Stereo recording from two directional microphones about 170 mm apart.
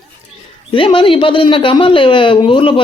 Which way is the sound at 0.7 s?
30° left (ahead or behind).